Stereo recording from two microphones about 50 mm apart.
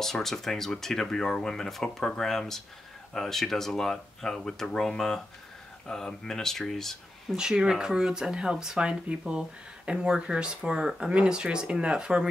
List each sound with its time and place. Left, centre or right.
0.0 s speech: centre
7.3 s speech: centre